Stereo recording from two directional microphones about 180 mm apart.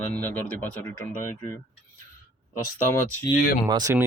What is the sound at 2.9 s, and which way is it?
Speech, 15° left (ahead or behind).